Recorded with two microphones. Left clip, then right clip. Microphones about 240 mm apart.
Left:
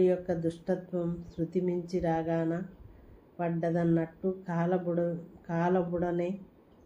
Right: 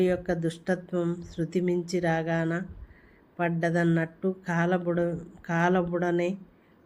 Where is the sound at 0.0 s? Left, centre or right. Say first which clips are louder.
Right 1 dB; right.